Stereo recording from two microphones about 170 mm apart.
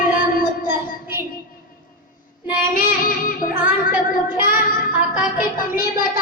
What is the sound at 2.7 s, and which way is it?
Child singing, 55° left (ahead or behind).